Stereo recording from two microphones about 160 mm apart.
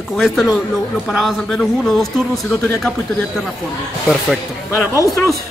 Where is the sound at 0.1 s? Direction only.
Centre (ahead or behind).